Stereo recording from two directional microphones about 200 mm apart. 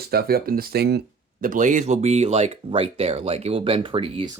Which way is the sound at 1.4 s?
40° right (ahead or behind).